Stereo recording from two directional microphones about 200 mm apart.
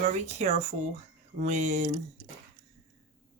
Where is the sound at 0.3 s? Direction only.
35° right (ahead or behind).